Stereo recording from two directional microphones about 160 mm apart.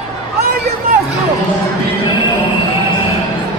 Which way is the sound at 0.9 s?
65° right (ahead or behind).